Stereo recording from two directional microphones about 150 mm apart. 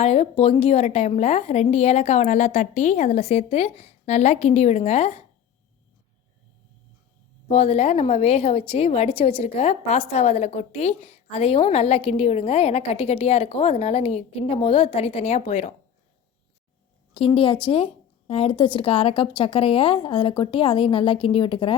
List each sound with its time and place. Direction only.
0.0 s a woman's voice: 45° left (ahead or behind)
7.4 s a woman's voice: 45° left (ahead or behind)
17.2 s a woman's voice: 35° left (ahead or behind)